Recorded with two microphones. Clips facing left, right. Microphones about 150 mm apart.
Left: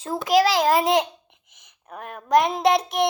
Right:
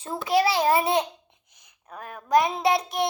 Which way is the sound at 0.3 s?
90° left.